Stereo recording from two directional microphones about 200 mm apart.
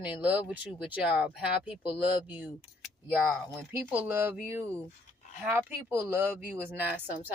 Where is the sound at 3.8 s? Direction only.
10° right (ahead or behind).